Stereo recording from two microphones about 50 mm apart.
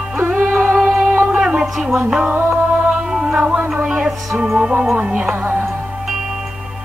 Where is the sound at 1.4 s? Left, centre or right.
Centre.